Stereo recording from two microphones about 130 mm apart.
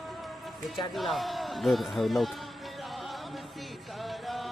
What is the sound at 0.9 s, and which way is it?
Speech, centre (ahead or behind).